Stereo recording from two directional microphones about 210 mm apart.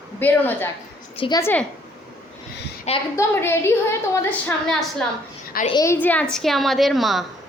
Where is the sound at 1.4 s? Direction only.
10° left (ahead or behind).